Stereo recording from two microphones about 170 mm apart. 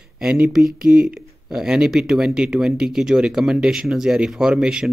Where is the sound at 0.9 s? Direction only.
55° right (ahead or behind).